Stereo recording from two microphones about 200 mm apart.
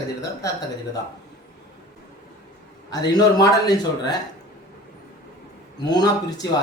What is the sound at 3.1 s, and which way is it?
Speech, 20° left (ahead or behind).